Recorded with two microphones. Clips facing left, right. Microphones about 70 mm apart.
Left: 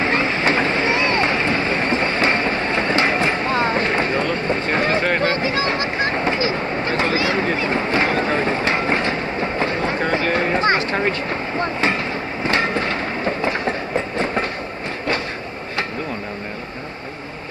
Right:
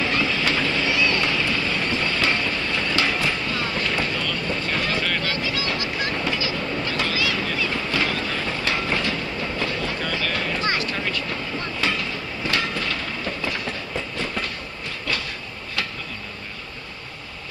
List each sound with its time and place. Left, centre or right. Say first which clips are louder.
0.0 s vehicle: left 4 dB; left